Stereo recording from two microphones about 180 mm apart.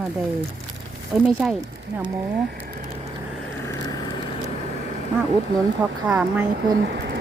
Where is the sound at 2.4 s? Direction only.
55° right (ahead or behind).